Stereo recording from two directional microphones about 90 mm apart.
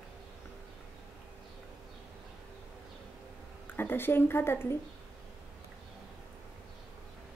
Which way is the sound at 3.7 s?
25° left (ahead or behind).